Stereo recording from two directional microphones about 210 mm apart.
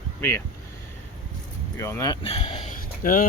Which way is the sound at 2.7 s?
40° left (ahead or behind).